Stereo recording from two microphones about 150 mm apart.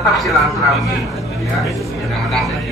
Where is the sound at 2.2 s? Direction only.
Centre (ahead or behind).